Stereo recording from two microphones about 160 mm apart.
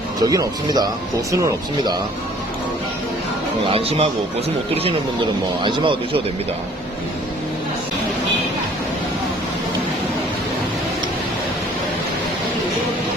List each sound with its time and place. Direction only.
0.2 s speech: 20° right (ahead or behind)
3.7 s speech: 35° right (ahead or behind)